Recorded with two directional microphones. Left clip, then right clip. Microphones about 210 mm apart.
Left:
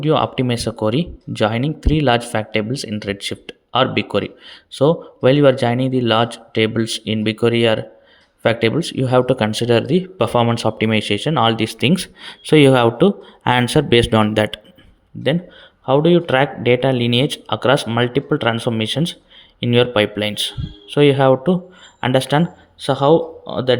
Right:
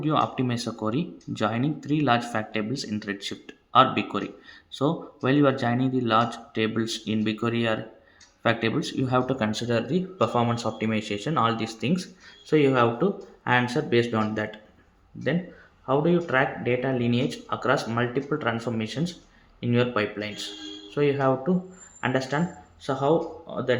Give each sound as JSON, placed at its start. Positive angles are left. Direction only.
{"t": 0.0, "sound": "speech", "side_deg": 35}